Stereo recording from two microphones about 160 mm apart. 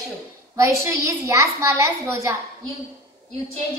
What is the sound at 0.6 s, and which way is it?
A woman's voice, 20° right (ahead or behind).